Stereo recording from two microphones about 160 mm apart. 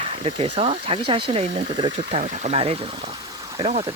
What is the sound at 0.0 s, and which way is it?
Speech, 35° right (ahead or behind).